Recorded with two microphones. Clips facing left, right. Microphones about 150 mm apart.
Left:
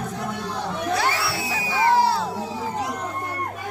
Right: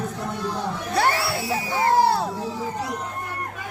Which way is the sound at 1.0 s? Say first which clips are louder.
Right 3 dB; 50° right (ahead or behind).